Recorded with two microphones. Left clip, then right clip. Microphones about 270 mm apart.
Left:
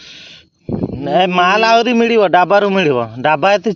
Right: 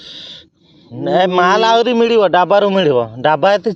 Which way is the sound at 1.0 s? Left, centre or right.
Left.